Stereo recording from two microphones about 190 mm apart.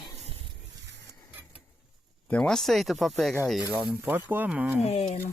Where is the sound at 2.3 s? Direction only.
5° left (ahead or behind).